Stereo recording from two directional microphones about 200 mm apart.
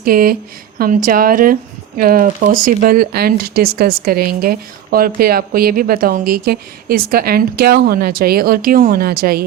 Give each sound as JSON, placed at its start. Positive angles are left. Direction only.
{"t": 0.0, "sound": "speech", "side_deg": -45}